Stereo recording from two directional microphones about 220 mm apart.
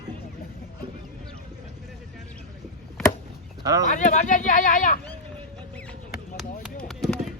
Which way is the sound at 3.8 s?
35° left (ahead or behind).